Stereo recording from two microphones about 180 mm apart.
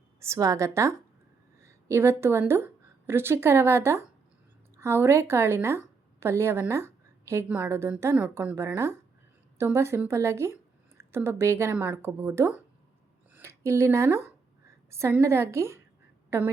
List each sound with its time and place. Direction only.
0.2 s a woman's voice: 15° right (ahead or behind)